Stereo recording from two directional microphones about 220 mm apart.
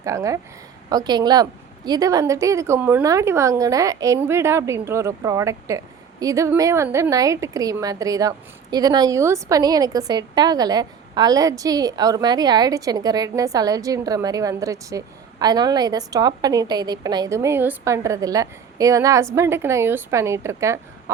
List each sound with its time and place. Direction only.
0.0 s a woman's voice: 15° right (ahead or behind)